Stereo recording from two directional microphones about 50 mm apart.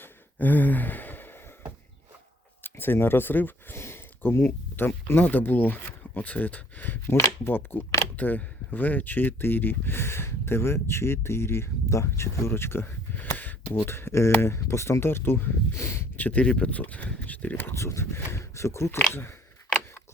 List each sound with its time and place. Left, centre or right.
0.3 s sigh: left
2.6 s speech: left
3.8 s a sound: left
4.2 s speech: left
5.2 s speech: left
13.1 s a sound: left
13.7 s speech: left
16.1 s speech: left
16.4 s speech: left
17.7 s speech: left
19.1 s speech: left